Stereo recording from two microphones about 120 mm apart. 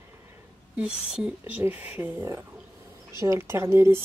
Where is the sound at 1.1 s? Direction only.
10° right (ahead or behind).